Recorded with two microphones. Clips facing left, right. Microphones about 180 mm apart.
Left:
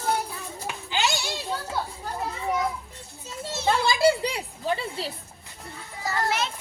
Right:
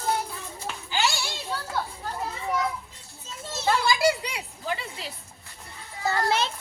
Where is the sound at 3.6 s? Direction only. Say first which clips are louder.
Left 2 dB; 25° left (ahead or behind).